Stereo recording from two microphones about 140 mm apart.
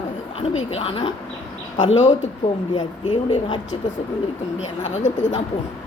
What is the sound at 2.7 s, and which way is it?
Speech, 40° left (ahead or behind).